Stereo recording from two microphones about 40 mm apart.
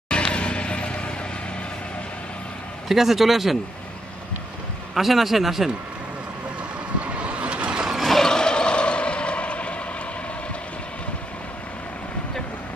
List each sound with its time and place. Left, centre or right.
0.1 s music: left
2.9 s a man's voice: centre
4.9 s a man's voice: centre
7.2 s vehicle: right
8.0 s a sound: centre
8.3 s vehicle: centre